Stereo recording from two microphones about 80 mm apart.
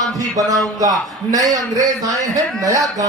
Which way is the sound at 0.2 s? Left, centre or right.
Right.